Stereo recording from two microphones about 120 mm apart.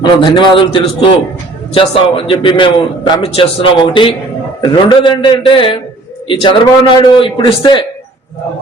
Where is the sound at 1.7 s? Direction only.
50° left (ahead or behind).